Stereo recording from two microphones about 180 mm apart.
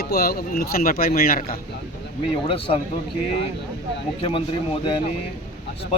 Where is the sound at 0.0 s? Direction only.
60° left (ahead or behind).